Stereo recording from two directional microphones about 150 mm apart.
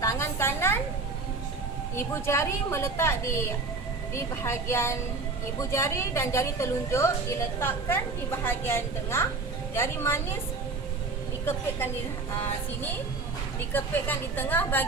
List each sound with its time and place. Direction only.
0.0 s a sound: 20° left (ahead or behind)
2.0 s a woman's voice: 15° left (ahead or behind)
13.7 s a woman's voice: 10° left (ahead or behind)